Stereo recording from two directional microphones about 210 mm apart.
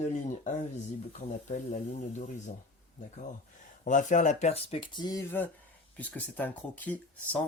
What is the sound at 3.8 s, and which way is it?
Speech, 35° left (ahead or behind).